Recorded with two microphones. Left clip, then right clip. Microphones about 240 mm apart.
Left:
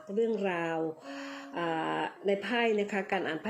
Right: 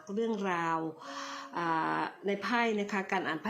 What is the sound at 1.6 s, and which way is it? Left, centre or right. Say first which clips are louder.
Speech: right 1 dB; right.